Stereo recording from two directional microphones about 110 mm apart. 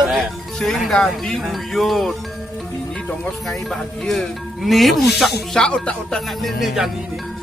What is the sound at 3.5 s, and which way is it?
Speech, centre (ahead or behind).